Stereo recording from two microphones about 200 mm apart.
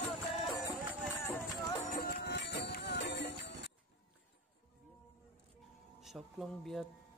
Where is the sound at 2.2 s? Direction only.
60° left (ahead or behind).